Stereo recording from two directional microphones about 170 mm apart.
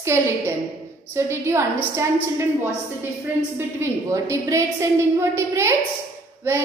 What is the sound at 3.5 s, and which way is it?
Speech, 15° right (ahead or behind).